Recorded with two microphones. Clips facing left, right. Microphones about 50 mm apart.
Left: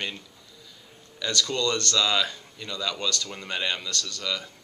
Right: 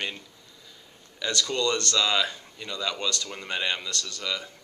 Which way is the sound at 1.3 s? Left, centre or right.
Centre.